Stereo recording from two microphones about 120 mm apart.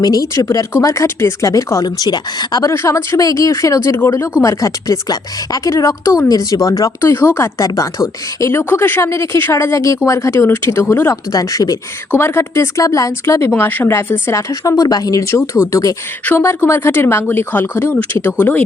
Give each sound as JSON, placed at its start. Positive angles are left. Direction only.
{"t": 0.0, "sound": "speech", "side_deg": 30}
{"t": 2.7, "sound": "speech", "side_deg": 20}